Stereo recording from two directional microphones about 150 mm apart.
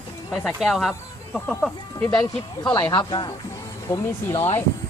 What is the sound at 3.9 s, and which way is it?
Speech, 20° left (ahead or behind).